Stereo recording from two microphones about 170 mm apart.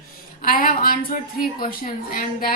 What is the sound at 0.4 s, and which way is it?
A woman's voice, 55° left (ahead or behind).